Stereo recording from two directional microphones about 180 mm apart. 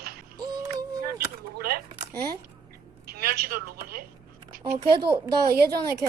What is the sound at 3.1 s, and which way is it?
Speech, 55° right (ahead or behind).